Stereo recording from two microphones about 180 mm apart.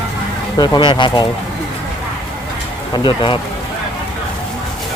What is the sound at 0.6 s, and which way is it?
Speech, 25° left (ahead or behind).